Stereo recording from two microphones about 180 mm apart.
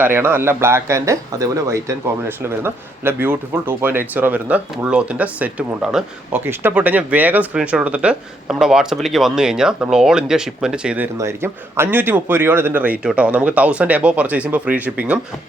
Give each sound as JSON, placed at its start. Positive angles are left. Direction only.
{"t": 0.0, "sound": "speech", "side_deg": -10}